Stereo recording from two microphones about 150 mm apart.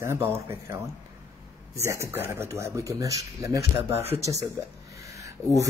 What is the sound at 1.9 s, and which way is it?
Speech, 20° right (ahead or behind).